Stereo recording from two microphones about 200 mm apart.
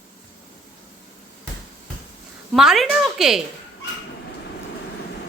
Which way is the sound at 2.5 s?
Centre (ahead or behind).